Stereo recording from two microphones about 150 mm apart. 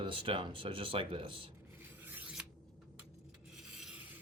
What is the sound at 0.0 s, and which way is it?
Speech, 35° right (ahead or behind).